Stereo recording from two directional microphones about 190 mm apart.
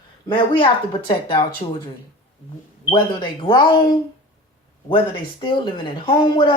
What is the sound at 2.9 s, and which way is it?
Speech, 25° left (ahead or behind).